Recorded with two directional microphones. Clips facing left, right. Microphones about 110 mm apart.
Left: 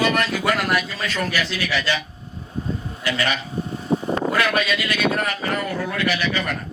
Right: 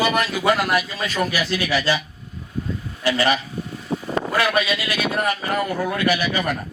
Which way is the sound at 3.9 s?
40° left (ahead or behind).